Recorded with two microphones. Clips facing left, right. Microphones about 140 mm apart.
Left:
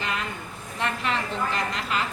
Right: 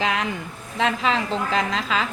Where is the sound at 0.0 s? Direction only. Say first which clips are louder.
Right 6 dB; 90° right.